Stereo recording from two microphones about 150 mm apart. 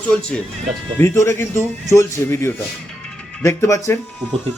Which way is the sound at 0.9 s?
15° left (ahead or behind).